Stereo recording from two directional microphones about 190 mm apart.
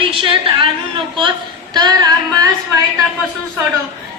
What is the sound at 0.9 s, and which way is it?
Speech, 25° right (ahead or behind).